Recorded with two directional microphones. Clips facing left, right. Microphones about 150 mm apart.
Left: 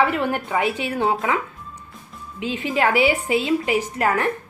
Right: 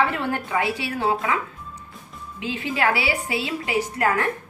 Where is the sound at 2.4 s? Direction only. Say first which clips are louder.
Left 2 dB; 20° left (ahead or behind).